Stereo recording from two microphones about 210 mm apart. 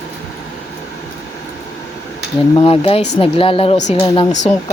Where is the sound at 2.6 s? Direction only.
25° left (ahead or behind).